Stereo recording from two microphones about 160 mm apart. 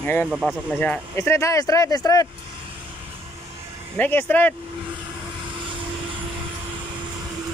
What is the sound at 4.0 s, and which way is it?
Speech, 10° left (ahead or behind).